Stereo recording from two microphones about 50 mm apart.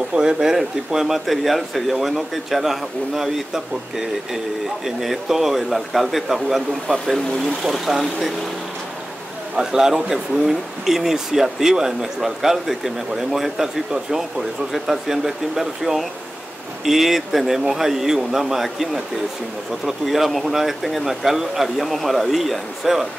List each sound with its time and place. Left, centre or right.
0.1 s speech: centre
6.9 s speech: centre
7.6 s speech: centre
9.6 s speech: centre
14.7 s speech: centre